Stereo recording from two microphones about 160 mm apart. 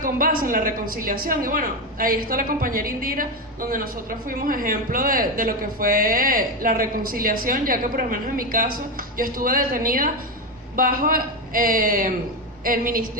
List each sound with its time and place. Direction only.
0.0 s a woman's voice: 60° right (ahead or behind)